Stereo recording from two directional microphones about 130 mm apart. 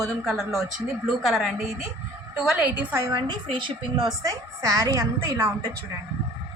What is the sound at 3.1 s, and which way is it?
A woman's voice, 35° right (ahead or behind).